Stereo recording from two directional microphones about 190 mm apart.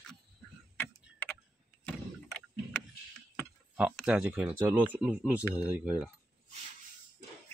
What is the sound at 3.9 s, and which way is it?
Speech, 5° right (ahead or behind).